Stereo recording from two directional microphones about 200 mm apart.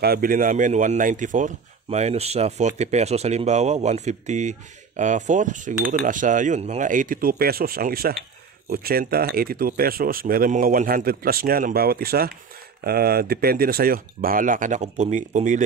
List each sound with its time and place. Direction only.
0.0 s speech: 45° right (ahead or behind)